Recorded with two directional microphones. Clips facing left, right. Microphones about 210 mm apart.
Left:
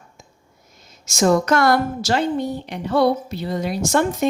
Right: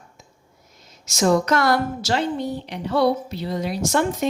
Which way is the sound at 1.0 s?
50° left (ahead or behind).